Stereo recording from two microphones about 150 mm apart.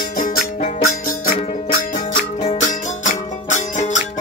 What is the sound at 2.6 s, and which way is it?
Music, 55° left (ahead or behind).